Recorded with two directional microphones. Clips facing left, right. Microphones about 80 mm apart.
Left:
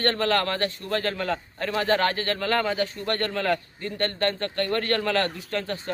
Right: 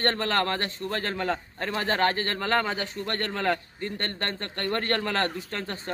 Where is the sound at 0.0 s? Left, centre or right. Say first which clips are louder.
Left 2 dB; right.